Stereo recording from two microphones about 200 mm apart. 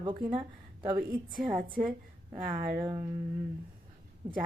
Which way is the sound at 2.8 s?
15° right (ahead or behind).